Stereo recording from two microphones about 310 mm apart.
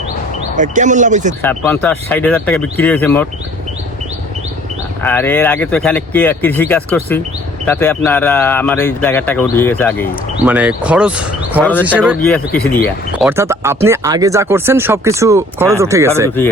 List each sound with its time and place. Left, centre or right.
0.5 s speech: right
1.4 s speech: centre
5.0 s speech: centre
10.4 s speech: centre
12.5 s speech: left
13.2 s speech: centre